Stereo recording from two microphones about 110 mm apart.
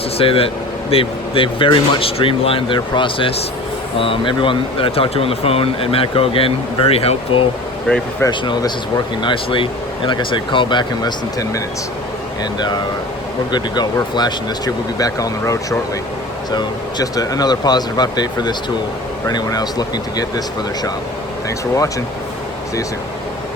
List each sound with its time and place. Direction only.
0.2 s speech: 60° left (ahead or behind)
8.3 s speech: 45° left (ahead or behind)